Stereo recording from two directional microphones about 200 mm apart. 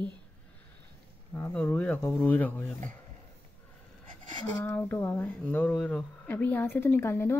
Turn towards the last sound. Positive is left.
turn(degrees=10)  # may be behind; listen again after turning